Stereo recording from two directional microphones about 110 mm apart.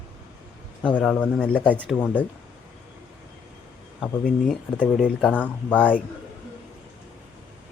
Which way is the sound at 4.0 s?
5° left (ahead or behind).